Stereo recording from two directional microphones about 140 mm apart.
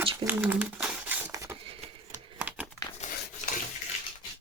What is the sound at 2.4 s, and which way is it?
Crumpling, 10° right (ahead or behind).